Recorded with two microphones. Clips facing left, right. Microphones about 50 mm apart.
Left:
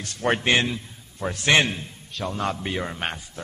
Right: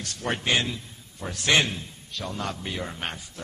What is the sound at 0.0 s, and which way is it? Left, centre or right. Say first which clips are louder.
A man's voice: left 6 dB; left.